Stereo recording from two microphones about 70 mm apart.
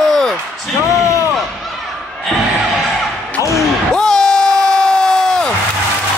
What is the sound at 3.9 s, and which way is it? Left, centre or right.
Crowd, centre.